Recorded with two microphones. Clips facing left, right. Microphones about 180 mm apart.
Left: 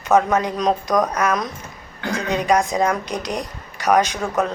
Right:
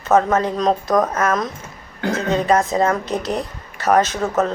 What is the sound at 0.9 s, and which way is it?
Speech, 5° right (ahead or behind).